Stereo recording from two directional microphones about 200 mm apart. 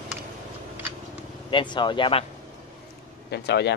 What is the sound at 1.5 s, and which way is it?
Speech, 25° left (ahead or behind).